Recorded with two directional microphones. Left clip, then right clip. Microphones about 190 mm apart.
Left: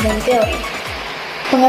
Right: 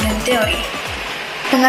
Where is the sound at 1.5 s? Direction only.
20° right (ahead or behind).